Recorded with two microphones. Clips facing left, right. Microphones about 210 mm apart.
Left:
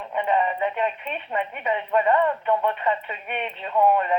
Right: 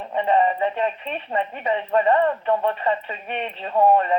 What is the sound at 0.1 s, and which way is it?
Speech, 35° right (ahead or behind).